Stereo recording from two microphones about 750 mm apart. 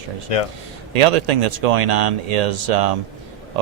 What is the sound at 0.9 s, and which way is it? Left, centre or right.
Speech, right.